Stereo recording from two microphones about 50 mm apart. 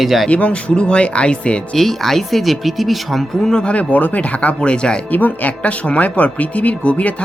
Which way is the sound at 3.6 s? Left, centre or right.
Left.